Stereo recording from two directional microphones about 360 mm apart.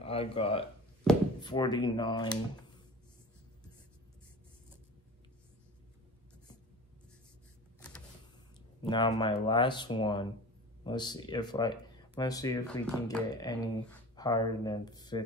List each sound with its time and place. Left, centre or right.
0.0 s speech: centre
1.1 s a sound: centre
1.4 s speech: centre
8.8 s speech: centre